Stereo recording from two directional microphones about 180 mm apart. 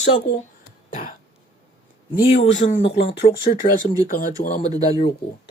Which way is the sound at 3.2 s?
45° left (ahead or behind).